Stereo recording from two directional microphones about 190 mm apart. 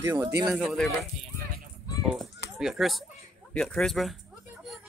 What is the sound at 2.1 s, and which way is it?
Speech, centre (ahead or behind).